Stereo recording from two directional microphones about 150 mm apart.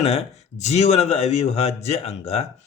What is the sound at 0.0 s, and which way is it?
Speech, 45° left (ahead or behind).